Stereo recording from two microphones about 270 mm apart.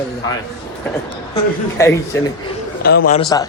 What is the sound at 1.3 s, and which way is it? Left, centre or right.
A man's voice, centre.